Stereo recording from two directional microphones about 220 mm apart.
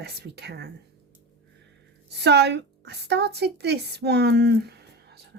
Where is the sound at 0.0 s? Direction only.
50° right (ahead or behind).